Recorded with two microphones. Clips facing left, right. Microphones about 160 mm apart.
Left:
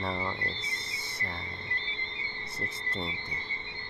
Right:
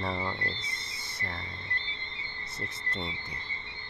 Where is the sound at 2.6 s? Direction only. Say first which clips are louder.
Left 1 dB; 30° left (ahead or behind).